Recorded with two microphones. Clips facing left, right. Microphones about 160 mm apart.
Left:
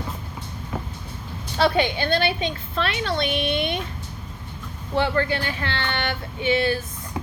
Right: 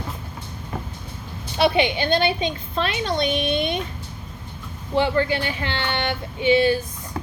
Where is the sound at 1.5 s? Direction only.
15° right (ahead or behind).